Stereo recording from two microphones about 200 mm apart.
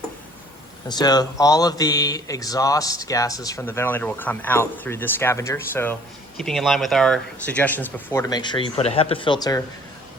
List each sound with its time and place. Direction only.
0.9 s speech: 20° left (ahead or behind)